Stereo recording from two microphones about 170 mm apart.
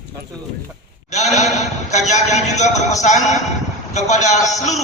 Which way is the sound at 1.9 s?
45° left (ahead or behind).